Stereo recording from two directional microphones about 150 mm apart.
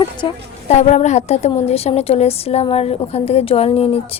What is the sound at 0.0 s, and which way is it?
Speech, 30° left (ahead or behind).